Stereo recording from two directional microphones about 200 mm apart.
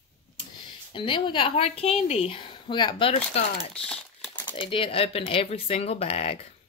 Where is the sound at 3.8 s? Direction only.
5° left (ahead or behind).